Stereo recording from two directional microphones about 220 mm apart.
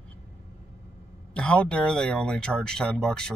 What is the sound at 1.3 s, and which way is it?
A man's voice, 5° left (ahead or behind).